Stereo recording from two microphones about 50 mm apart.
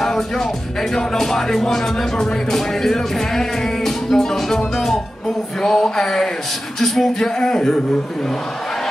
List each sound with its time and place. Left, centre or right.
0.0 s music: centre